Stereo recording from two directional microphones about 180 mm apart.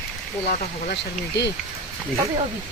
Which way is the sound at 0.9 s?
70° left (ahead or behind).